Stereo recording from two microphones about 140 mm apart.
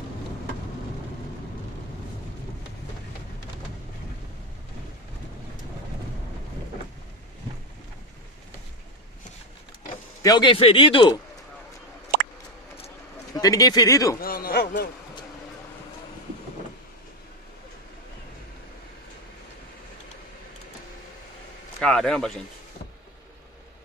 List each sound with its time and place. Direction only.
10.2 s a man's voice: 30° left (ahead or behind)
13.3 s speech: 25° left (ahead or behind)
14.2 s a sound: 90° left
21.7 s a man's voice: 5° left (ahead or behind)